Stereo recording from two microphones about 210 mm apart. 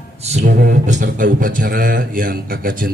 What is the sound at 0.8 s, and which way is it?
A man's voice, 35° right (ahead or behind).